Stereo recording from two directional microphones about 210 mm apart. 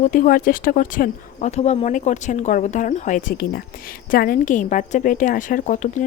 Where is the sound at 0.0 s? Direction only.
40° left (ahead or behind).